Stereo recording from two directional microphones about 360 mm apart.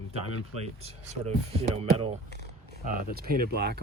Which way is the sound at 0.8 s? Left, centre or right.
Centre.